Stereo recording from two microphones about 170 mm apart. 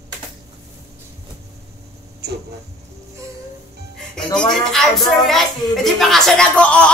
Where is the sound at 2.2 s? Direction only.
75° right (ahead or behind).